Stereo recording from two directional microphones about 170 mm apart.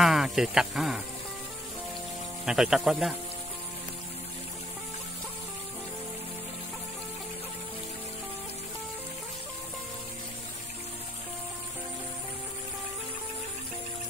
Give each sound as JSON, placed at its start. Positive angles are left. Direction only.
{"t": 0.0, "sound": "speech", "side_deg": 0}
{"t": 2.4, "sound": "a man's voice", "side_deg": 0}